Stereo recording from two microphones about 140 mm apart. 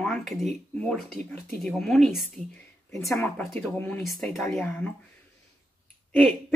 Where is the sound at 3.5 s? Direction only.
15° left (ahead or behind).